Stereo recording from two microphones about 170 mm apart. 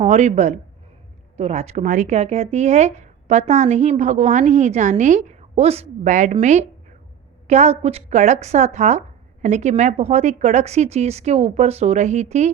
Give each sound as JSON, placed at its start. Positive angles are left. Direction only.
{"t": 0.0, "sound": "speech", "side_deg": -40}